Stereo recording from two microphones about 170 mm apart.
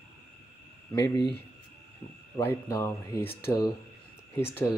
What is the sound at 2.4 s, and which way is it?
Speech, 15° left (ahead or behind).